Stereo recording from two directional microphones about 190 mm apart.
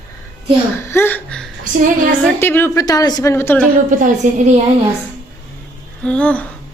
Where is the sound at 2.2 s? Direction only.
10° left (ahead or behind).